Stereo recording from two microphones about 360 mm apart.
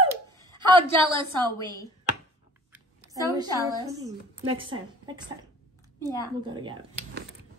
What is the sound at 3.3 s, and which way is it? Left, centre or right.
Speech, centre.